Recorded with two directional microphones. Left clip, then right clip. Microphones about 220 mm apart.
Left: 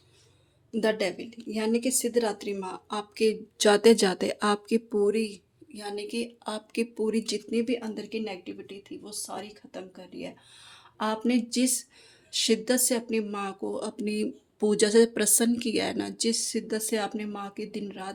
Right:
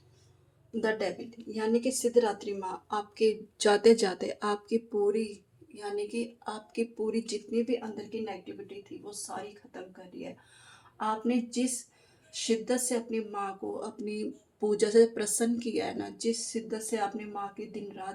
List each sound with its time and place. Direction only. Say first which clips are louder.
0.7 s a woman's voice: left 4 dB; 40° left (ahead or behind)
10.9 s speech: left 3 dB; 45° left (ahead or behind)